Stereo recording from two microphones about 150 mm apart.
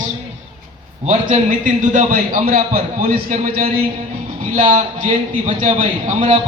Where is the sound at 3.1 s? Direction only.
65° right (ahead or behind).